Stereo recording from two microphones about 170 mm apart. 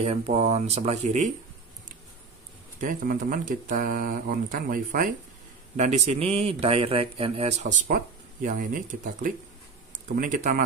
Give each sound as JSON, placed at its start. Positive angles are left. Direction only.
{"t": 0.0, "sound": "a man's voice", "side_deg": -40}
{"t": 2.8, "sound": "speech", "side_deg": -50}
{"t": 5.8, "sound": "a man's voice", "side_deg": -40}
{"t": 7.9, "sound": "speech", "side_deg": -50}